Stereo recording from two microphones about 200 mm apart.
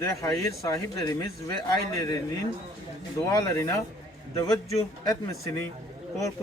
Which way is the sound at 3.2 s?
15° left (ahead or behind).